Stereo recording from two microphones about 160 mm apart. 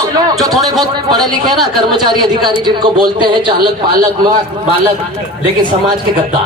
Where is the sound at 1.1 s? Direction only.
25° right (ahead or behind).